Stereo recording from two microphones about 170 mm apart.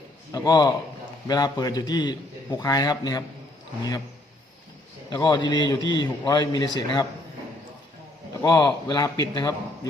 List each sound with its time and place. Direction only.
0.3 s a man's voice: 20° left (ahead or behind)
5.0 s a man's voice: 25° left (ahead or behind)
8.3 s a man's voice: 20° left (ahead or behind)